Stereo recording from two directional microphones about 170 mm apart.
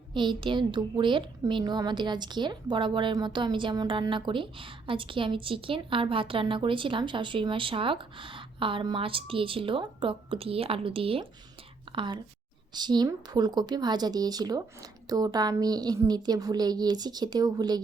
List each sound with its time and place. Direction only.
0.1 s a woman's voice: 30° right (ahead or behind)